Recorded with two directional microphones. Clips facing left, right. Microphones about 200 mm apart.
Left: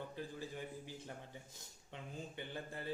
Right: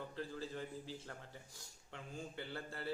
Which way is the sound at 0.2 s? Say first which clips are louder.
Right 3 dB; 15° left (ahead or behind).